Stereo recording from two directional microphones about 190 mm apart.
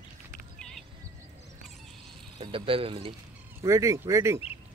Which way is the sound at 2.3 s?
30° right (ahead or behind).